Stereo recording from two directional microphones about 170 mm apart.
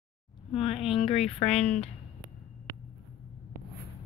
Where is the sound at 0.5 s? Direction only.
35° left (ahead or behind).